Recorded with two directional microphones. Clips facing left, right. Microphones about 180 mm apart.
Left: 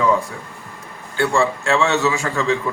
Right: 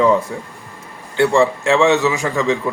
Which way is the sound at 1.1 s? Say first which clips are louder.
Right 4 dB; 20° right (ahead or behind).